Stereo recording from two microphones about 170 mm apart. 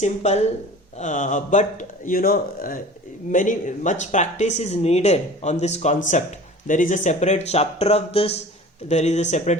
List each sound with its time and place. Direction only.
0.0 s speech: 40° left (ahead or behind)